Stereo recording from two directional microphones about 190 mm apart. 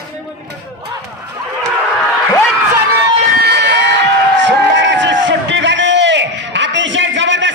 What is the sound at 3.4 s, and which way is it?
Crowd, 65° right (ahead or behind).